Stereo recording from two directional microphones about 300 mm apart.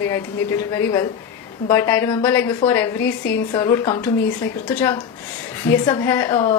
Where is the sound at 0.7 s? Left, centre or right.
Centre.